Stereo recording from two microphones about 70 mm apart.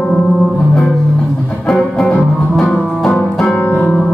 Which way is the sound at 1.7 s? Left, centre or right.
Centre.